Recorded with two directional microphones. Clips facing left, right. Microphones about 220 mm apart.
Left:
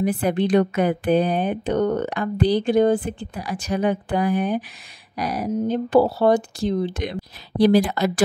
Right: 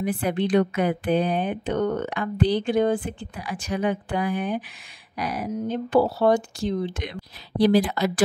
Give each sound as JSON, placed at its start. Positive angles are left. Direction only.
{"t": 0.0, "sound": "a woman's voice", "side_deg": 40}